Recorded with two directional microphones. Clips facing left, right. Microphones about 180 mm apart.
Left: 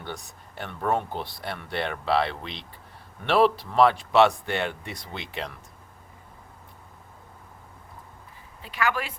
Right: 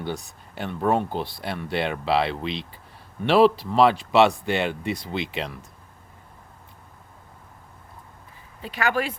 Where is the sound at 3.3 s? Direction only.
30° right (ahead or behind).